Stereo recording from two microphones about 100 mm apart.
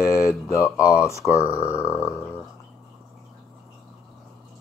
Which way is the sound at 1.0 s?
30° left (ahead or behind).